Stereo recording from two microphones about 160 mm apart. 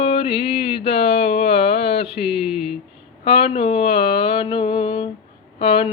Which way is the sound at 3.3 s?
35° left (ahead or behind).